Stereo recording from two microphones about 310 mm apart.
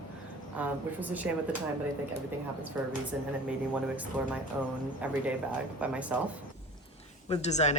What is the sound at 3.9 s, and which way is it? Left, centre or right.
Speech, centre.